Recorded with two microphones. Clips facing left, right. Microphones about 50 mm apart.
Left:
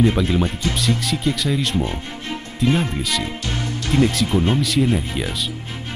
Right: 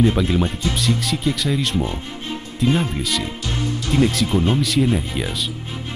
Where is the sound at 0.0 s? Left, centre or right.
Centre.